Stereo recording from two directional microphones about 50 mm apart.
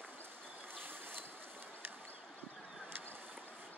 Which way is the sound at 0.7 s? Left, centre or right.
Right.